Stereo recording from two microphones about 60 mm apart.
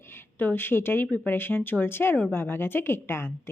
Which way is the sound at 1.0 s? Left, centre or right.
Left.